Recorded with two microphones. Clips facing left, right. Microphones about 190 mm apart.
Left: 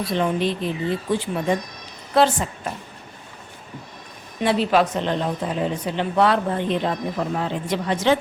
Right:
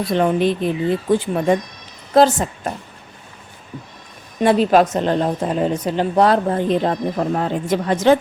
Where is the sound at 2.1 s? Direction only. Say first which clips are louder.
Right 5 dB; 40° right (ahead or behind).